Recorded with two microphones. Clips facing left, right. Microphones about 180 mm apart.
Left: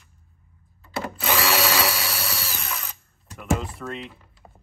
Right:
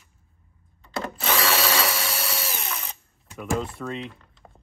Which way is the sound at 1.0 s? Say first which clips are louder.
Left 1 dB; 5° left (ahead or behind).